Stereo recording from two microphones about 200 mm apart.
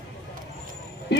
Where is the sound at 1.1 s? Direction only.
60° left (ahead or behind).